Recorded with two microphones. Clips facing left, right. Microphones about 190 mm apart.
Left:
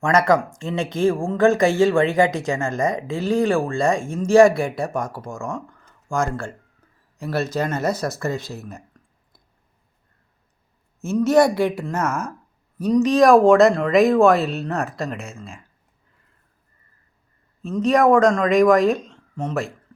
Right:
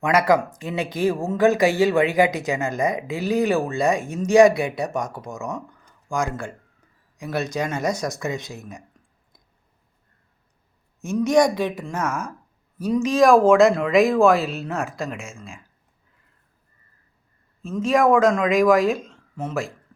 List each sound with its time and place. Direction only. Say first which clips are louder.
0.0 s speech: left 1 dB; 5° right (ahead or behind)
3.1 s speech: left 2 dB; 15° right (ahead or behind)
4.7 s speech: left 1 dB; centre (ahead or behind)
5.5 s a sound: left 2 dB; 15° right (ahead or behind)
7.2 s speech: left 2 dB; 15° right (ahead or behind)
11.0 s speech: left 2 dB; 15° right (ahead or behind)
11.3 s speech: left 1 dB; 10° left (ahead or behind)
11.9 s speech: left 2 dB; 10° right (ahead or behind)
17.6 s speech: left 2 dB; centre (ahead or behind)